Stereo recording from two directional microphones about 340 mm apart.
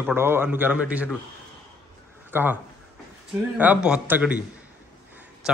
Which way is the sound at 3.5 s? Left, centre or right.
Centre.